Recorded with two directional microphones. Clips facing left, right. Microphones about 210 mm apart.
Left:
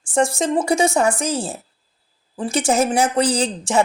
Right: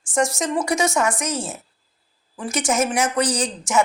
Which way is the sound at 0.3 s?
30° left (ahead or behind).